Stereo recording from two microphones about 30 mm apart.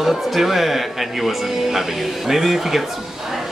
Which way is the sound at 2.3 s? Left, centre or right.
Centre.